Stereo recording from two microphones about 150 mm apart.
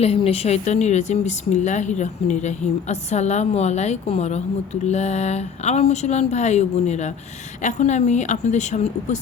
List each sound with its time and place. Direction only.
0.0 s a woman's voice: 40° left (ahead or behind)